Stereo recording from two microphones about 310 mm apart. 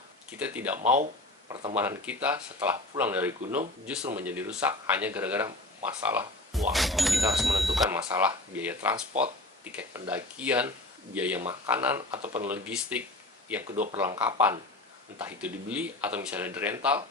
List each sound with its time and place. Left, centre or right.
0.3 s speech: centre
1.5 s speech: centre
1.8 s speech: centre